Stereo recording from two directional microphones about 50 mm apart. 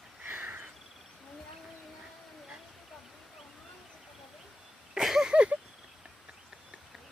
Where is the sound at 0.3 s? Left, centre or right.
Right.